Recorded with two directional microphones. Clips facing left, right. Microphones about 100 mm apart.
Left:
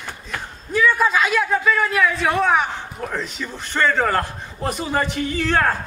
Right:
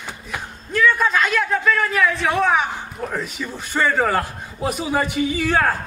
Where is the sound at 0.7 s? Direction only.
5° left (ahead or behind).